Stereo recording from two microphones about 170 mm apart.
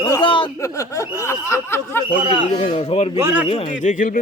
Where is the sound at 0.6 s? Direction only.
20° left (ahead or behind).